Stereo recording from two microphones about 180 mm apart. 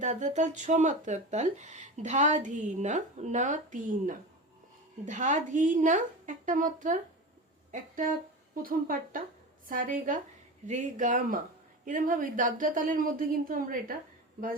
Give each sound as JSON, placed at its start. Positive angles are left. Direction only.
{"t": 0.0, "sound": "a woman's voice", "side_deg": -45}